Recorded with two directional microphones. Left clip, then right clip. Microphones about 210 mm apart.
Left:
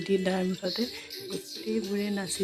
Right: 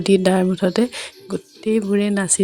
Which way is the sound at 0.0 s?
40° right (ahead or behind).